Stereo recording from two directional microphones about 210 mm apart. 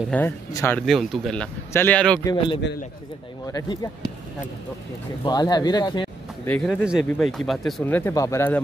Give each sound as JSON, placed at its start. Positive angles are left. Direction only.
{"t": 0.1, "sound": "speech", "side_deg": 10}
{"t": 0.8, "sound": "speech", "side_deg": 0}
{"t": 2.2, "sound": "a man's voice", "side_deg": 25}
{"t": 5.2, "sound": "speech", "side_deg": 20}
{"t": 6.5, "sound": "speech", "side_deg": 5}